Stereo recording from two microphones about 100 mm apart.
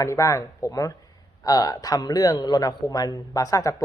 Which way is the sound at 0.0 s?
30° left (ahead or behind).